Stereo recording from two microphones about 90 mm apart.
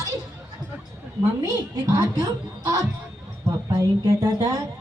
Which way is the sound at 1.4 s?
45° right (ahead or behind).